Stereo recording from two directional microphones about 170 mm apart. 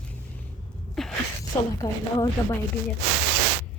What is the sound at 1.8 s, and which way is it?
Speech, 20° left (ahead or behind).